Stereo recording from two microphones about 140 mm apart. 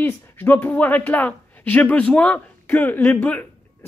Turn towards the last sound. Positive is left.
turn(degrees=10)  # may be behind; listen again after turning